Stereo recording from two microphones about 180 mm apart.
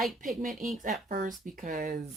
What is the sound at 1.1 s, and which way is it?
Speech, 45° right (ahead or behind).